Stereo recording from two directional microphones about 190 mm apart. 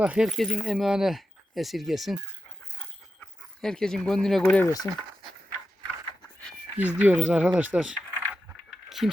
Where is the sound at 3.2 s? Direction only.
5° left (ahead or behind).